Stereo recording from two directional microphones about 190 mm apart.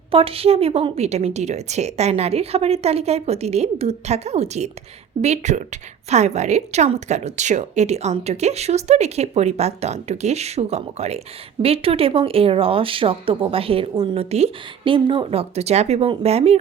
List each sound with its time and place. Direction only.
0.1 s a woman's voice: 30° right (ahead or behind)